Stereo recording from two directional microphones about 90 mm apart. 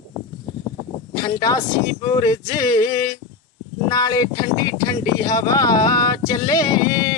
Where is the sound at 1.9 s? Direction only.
55° left (ahead or behind).